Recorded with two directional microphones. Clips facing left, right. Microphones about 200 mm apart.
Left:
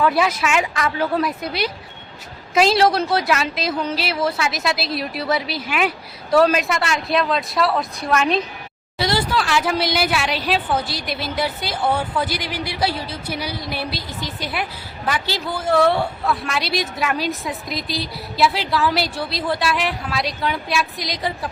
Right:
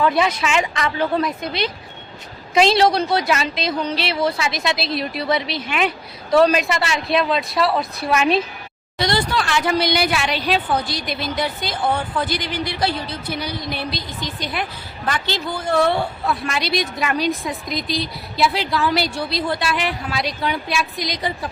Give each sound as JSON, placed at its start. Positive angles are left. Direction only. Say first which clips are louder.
{"t": 0.0, "sound": "speech", "louder": "even", "side_deg": 5}